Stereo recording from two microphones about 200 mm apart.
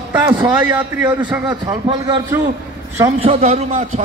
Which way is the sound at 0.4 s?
10° right (ahead or behind).